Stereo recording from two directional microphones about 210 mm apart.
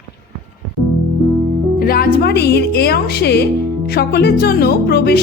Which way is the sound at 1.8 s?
45° left (ahead or behind).